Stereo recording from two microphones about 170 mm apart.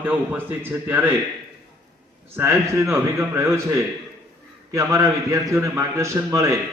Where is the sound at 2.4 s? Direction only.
15° right (ahead or behind).